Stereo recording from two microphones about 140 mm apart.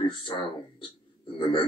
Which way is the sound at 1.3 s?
35° left (ahead or behind).